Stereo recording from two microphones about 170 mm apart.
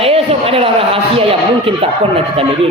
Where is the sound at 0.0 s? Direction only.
35° right (ahead or behind).